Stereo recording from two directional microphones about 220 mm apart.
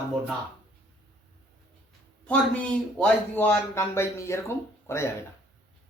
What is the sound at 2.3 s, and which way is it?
A man's voice, 5° left (ahead or behind).